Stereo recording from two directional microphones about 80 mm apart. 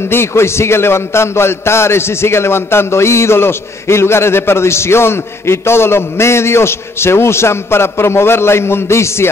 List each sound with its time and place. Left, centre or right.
0.1 s a man's voice: left